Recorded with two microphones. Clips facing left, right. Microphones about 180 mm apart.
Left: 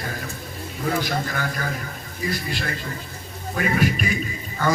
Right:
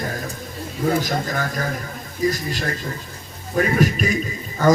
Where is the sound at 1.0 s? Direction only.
40° right (ahead or behind).